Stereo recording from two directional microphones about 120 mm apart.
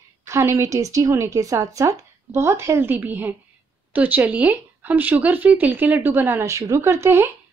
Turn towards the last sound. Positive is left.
turn(degrees=-20)  # may be behind; listen again after turning